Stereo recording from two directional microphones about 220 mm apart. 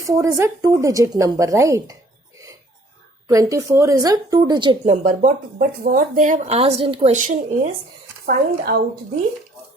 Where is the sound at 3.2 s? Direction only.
15° right (ahead or behind); by 8.7 s 40° right (ahead or behind).